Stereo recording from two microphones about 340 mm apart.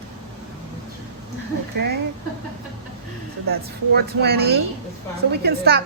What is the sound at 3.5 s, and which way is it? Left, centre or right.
A woman's voice, right.